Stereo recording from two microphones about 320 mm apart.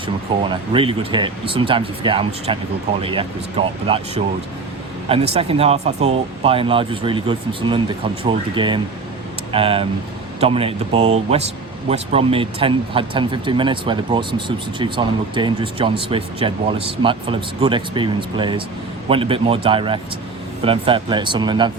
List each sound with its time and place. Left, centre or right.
0.4 s speech: centre